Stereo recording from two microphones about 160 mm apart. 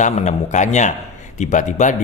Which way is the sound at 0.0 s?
45° left (ahead or behind).